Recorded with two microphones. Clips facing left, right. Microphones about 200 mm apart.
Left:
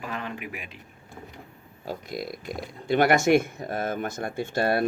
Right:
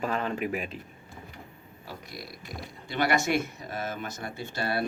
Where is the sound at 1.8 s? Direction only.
50° left (ahead or behind).